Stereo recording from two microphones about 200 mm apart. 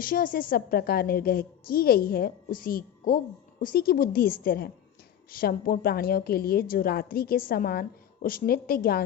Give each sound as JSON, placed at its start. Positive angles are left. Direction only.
{"t": 0.0, "sound": "a woman's voice", "side_deg": 45}